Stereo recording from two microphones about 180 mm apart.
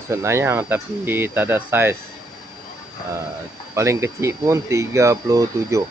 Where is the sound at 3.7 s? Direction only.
15° right (ahead or behind).